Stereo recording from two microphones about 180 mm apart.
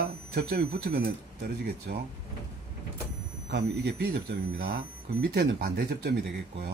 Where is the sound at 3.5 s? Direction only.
65° right (ahead or behind).